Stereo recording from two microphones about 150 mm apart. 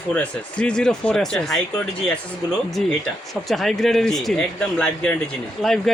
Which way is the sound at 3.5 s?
Centre (ahead or behind).